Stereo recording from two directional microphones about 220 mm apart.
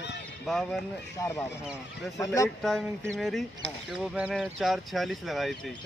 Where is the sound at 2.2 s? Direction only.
15° left (ahead or behind).